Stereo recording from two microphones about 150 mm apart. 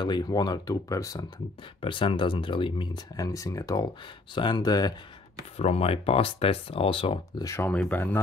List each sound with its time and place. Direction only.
0.0 s speech: 30° left (ahead or behind)
1.8 s speech: 35° left (ahead or behind)
5.6 s speech: 45° left (ahead or behind)
7.4 s speech: 15° left (ahead or behind)